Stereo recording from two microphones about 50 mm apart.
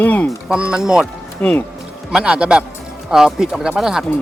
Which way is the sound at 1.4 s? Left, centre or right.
Left.